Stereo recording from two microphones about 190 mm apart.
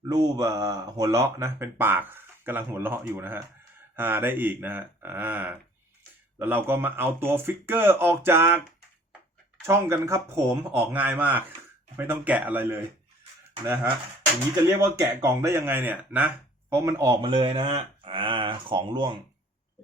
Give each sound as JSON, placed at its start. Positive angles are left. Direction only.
{"t": 0.1, "sound": "speech", "side_deg": -20}
{"t": 9.6, "sound": "speech", "side_deg": -15}
{"t": 14.9, "sound": "speech", "side_deg": -15}